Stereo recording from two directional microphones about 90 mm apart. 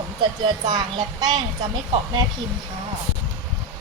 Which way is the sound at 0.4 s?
55° right (ahead or behind).